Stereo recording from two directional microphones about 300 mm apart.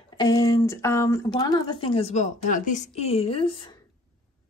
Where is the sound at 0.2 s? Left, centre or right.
Centre.